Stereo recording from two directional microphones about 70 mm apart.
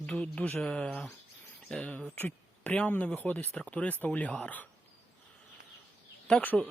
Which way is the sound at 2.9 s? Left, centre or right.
Left.